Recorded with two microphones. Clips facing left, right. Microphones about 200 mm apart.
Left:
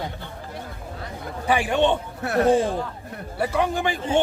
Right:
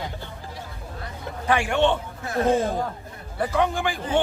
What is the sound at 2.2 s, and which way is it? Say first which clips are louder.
Speech: left 4 dB; 70° left (ahead or behind).